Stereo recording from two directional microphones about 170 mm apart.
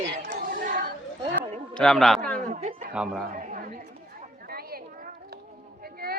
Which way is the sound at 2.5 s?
40° right (ahead or behind).